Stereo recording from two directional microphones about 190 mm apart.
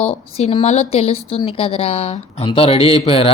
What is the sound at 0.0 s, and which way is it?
A woman's voice, 35° left (ahead or behind).